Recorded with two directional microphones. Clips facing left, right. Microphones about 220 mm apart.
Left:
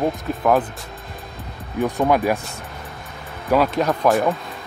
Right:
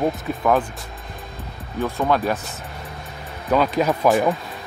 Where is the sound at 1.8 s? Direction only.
15° left (ahead or behind).